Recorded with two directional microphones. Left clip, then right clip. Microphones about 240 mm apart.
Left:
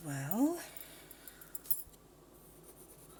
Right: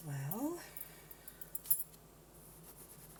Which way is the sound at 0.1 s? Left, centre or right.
Left.